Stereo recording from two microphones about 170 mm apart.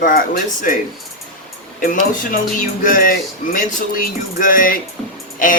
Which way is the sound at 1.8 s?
55° left (ahead or behind).